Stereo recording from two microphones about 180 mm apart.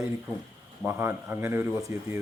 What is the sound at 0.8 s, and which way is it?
Speech, 10° right (ahead or behind).